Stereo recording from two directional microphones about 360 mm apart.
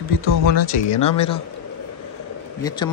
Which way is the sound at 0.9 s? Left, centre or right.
Centre.